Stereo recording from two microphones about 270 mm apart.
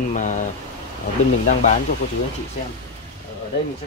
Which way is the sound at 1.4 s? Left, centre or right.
Left.